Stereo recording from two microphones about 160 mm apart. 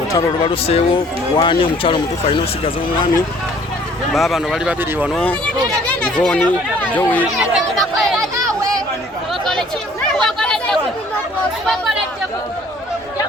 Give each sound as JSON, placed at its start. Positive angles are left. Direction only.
{"t": 0.1, "sound": "speech", "side_deg": 20}
{"t": 0.5, "sound": "speech", "side_deg": 35}
{"t": 4.1, "sound": "speech", "side_deg": 0}
{"t": 5.0, "sound": "speech", "side_deg": 5}
{"t": 7.3, "sound": "speech", "side_deg": 0}
{"t": 8.2, "sound": "a sound", "side_deg": -20}
{"t": 9.3, "sound": "chatter", "side_deg": 0}